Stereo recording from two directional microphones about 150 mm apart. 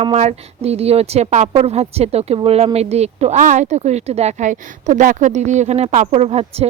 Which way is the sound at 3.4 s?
55° right (ahead or behind).